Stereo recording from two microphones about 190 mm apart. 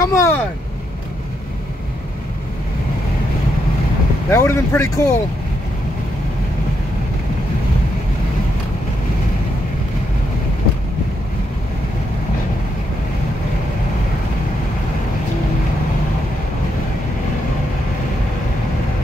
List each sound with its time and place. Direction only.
0.0 s speech: 15° left (ahead or behind)
4.3 s speech: 15° left (ahead or behind)